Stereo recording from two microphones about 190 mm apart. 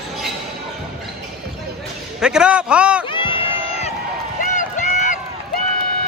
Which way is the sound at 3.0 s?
25° left (ahead or behind).